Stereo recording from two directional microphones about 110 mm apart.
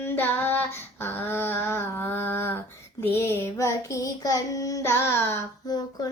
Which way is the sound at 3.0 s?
25° left (ahead or behind).